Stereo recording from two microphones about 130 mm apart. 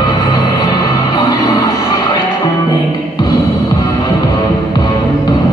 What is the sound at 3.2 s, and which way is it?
Music, 30° left (ahead or behind).